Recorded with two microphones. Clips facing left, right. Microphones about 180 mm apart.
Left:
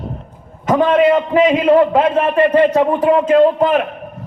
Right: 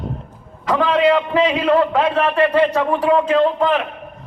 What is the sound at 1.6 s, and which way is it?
Speech, 25° left (ahead or behind).